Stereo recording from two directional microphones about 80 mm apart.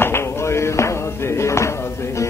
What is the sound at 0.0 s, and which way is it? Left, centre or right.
Music, left.